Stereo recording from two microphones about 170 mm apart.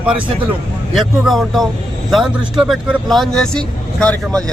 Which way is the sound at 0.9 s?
Centre (ahead or behind).